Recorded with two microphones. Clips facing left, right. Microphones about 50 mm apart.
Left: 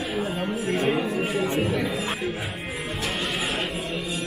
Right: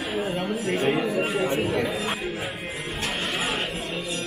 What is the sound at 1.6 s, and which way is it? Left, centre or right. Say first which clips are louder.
Chatter: even; centre.